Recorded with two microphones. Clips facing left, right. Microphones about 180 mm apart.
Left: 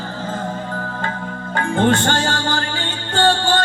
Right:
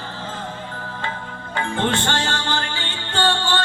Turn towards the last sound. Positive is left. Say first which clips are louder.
# left 5 dB
turn(degrees=45)  # may be behind; listen again after turning